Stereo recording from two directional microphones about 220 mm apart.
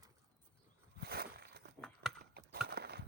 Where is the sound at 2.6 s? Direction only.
45° right (ahead or behind).